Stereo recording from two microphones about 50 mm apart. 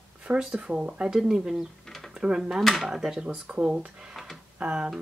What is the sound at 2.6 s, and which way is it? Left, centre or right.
Speech, centre.